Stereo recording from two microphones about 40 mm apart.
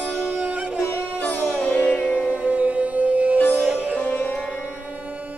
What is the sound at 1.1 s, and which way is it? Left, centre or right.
Music, left.